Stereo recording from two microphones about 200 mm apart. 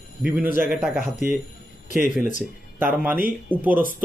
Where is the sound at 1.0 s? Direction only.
45° right (ahead or behind).